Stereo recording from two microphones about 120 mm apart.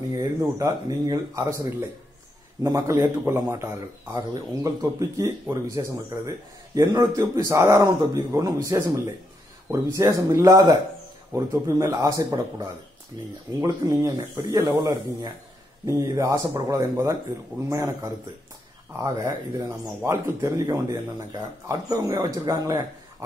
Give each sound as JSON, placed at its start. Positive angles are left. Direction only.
{"t": 0.1, "sound": "speech", "side_deg": -30}
{"t": 4.9, "sound": "speech", "side_deg": -25}